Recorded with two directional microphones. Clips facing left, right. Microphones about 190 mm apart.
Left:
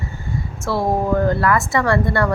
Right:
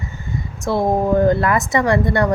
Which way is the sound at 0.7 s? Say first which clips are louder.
Right 2 dB; 20° right (ahead or behind).